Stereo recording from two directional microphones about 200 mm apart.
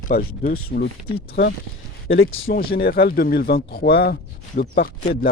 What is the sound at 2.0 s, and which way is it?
Speech, 85° left.